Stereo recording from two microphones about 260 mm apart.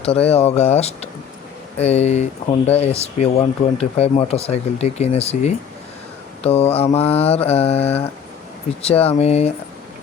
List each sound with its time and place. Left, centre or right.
0.3 s speech: left